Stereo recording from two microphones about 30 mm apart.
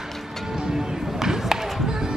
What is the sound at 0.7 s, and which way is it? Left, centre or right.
Basketball bounce, centre.